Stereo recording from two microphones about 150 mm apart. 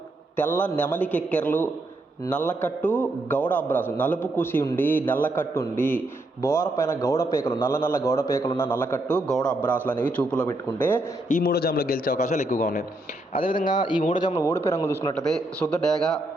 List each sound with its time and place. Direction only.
0.3 s a man's voice: 15° left (ahead or behind)
11.3 s a man's voice: 80° left
12.2 s a man's voice: 50° left (ahead or behind)
13.3 s speech: 35° left (ahead or behind)
14.3 s speech: 20° left (ahead or behind)
15.1 s a man's voice: 5° left (ahead or behind)